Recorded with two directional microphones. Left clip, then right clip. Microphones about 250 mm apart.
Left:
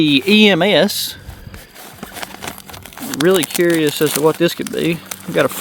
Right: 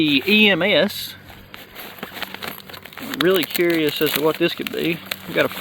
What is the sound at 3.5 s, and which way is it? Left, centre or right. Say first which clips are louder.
Speech: left 4 dB; left.